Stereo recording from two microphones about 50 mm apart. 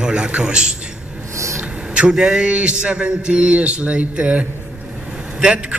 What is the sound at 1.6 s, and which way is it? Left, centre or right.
A man's voice, centre.